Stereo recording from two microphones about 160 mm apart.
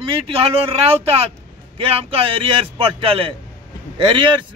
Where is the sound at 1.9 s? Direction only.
35° right (ahead or behind).